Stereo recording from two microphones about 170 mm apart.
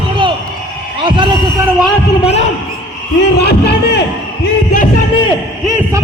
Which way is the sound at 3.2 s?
75° left (ahead or behind).